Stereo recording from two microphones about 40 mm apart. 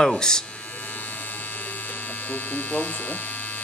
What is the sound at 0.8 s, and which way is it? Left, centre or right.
Electric shaver, left.